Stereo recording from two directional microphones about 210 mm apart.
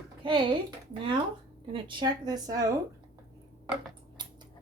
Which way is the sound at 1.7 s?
20° right (ahead or behind).